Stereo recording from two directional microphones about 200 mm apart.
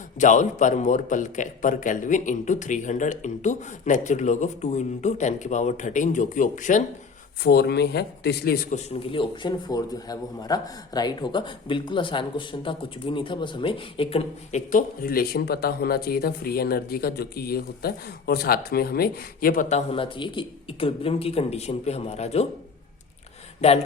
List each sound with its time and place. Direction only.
0.2 s a man's voice: 40° left (ahead or behind)
7.4 s speech: 50° left (ahead or behind)
8.7 s a man's voice: 30° left (ahead or behind)
23.6 s speech: 30° left (ahead or behind)